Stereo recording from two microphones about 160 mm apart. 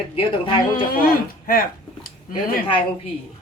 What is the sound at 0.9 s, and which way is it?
Speech, 65° left (ahead or behind).